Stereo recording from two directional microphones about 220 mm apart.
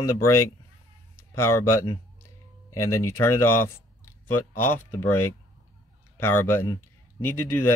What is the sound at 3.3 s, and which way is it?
Speech, 90° left.